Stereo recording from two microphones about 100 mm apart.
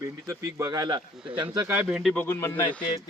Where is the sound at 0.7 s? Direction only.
45° right (ahead or behind).